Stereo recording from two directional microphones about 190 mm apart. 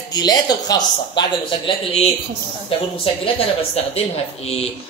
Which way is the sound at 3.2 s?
30° left (ahead or behind).